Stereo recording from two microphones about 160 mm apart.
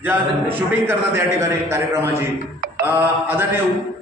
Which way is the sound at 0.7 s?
15° right (ahead or behind).